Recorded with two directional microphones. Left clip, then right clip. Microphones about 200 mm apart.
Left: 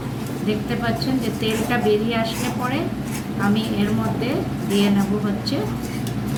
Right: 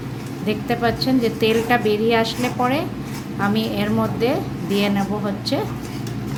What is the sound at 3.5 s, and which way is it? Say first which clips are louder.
Speech: right 2 dB; 55° right (ahead or behind).